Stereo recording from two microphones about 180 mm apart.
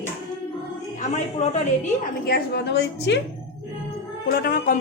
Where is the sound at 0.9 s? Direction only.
40° left (ahead or behind).